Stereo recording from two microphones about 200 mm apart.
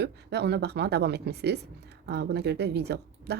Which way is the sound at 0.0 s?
55° right (ahead or behind).